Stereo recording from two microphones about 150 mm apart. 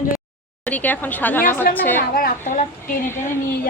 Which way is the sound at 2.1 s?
70° left (ahead or behind).